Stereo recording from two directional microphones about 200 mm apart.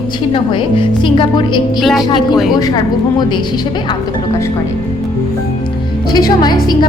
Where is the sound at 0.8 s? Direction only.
25° left (ahead or behind).